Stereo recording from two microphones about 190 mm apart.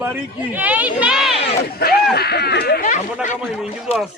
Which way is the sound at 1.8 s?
55° left (ahead or behind).